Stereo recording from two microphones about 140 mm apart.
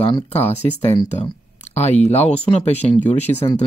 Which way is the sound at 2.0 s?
50° left (ahead or behind).